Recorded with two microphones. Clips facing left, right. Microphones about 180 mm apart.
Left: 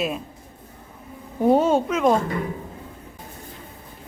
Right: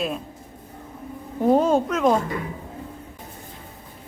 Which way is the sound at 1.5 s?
Centre (ahead or behind).